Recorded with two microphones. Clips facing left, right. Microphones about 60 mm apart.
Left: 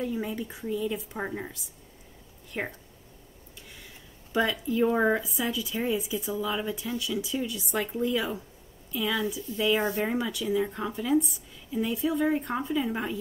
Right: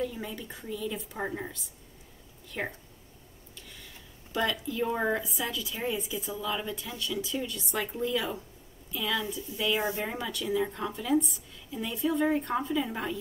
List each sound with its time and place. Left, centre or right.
0.0 s a woman's voice: centre
2.6 s speech: centre
4.3 s a woman's voice: centre
5.2 s a woman's voice: centre